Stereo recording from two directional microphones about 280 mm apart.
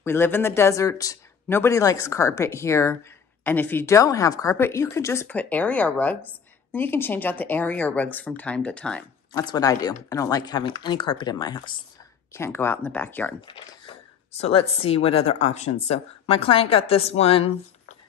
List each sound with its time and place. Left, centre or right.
0.0 s speech: centre
13.5 s speech: centre